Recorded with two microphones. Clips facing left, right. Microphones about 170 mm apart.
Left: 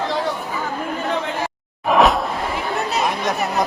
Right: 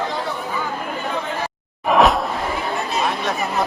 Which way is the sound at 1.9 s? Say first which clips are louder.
Even; centre (ahead or behind).